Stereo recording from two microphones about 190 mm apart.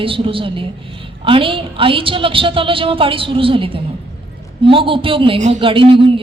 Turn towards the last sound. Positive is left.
turn(degrees=-25)  # may be behind; listen again after turning